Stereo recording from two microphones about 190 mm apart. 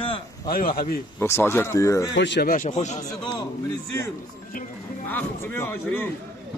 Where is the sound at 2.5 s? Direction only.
40° left (ahead or behind).